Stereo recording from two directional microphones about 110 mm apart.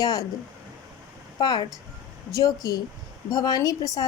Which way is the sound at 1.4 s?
40° left (ahead or behind).